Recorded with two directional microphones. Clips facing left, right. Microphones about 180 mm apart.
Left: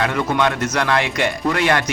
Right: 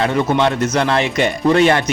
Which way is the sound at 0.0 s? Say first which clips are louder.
Right 3 dB; 25° right (ahead or behind).